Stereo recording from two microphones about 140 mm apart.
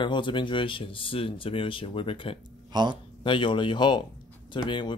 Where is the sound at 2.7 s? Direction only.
30° right (ahead or behind).